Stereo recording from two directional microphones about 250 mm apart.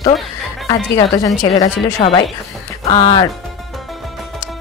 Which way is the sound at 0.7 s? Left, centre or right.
Centre.